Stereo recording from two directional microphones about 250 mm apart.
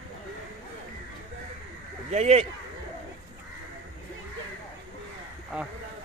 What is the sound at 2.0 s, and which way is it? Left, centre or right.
Speech, right.